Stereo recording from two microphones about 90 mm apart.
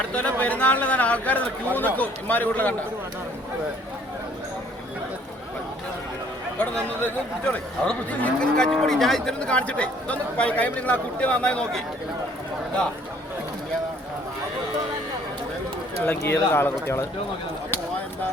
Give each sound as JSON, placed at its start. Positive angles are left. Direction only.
{"t": 0.1, "sound": "livestock", "side_deg": 15}
{"t": 7.0, "sound": "livestock", "side_deg": 15}
{"t": 16.2, "sound": "speech", "side_deg": 25}